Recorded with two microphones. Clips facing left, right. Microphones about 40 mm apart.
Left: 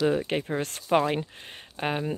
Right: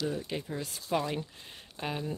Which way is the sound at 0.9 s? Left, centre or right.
Left.